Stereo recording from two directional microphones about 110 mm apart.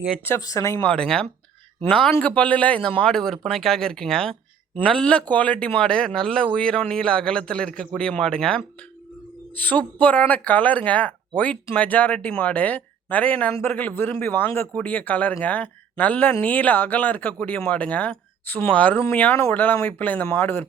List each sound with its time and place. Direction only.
0.3 s speech: 30° left (ahead or behind)
0.9 s speech: 5° left (ahead or behind)